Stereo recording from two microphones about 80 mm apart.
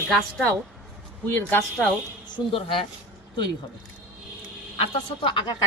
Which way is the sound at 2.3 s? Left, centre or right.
Left.